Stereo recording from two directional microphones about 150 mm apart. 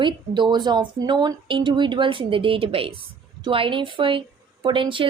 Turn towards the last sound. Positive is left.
turn(degrees=-35)  # may be behind; listen again after turning